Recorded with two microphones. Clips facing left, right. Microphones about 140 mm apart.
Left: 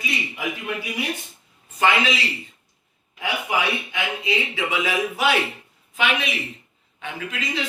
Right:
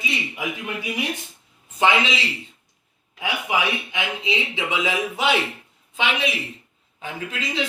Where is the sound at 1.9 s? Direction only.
Centre (ahead or behind).